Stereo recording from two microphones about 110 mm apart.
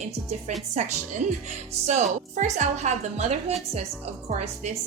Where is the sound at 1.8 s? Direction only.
90° right.